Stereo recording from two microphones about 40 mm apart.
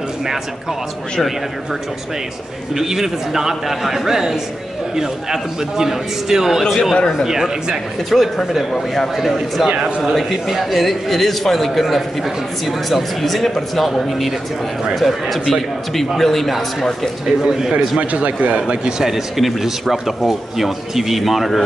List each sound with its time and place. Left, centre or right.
2.7 s a man's voice: centre
6.7 s speech: centre
7.0 s speech: centre
7.2 s a man's voice: centre
8.1 s speech: centre
17.4 s a man's voice: centre
18.2 s a man's voice: right
18.7 s a man's voice: centre